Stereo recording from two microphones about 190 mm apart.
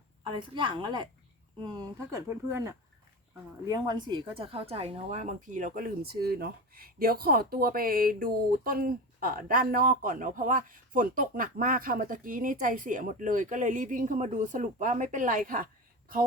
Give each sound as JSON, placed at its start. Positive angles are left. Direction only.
{"t": 0.3, "sound": "a woman's voice", "side_deg": -25}
{"t": 2.1, "sound": "a woman's voice", "side_deg": -15}